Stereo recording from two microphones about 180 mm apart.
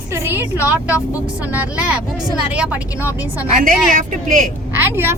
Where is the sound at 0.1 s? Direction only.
15° right (ahead or behind).